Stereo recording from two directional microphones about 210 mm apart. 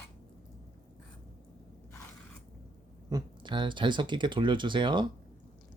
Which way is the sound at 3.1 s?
20° right (ahead or behind).